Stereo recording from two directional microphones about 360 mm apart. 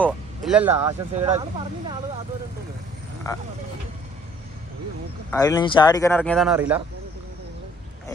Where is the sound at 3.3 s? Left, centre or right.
Centre.